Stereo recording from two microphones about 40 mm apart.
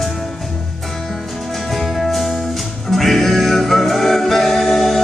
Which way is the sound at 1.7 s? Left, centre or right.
Centre.